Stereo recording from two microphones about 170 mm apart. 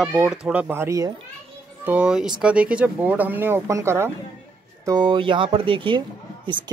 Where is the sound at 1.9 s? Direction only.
5° right (ahead or behind).